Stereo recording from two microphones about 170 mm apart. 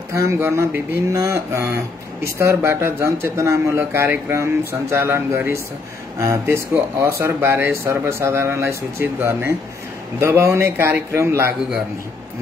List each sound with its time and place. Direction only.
0.1 s speech: 15° right (ahead or behind)